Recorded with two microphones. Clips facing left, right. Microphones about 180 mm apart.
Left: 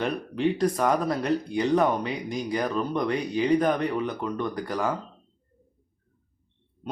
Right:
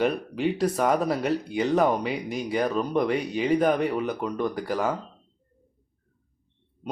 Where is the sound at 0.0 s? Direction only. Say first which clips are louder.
Right 1 dB; 5° right (ahead or behind).